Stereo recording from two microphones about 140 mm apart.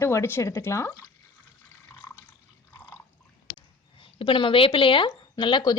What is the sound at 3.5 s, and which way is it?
Speech, 40° left (ahead or behind).